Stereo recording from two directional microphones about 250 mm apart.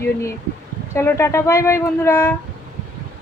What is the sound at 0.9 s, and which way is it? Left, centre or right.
A woman's voice, centre.